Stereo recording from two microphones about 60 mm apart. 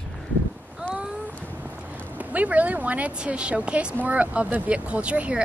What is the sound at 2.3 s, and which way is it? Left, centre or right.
Speech, right.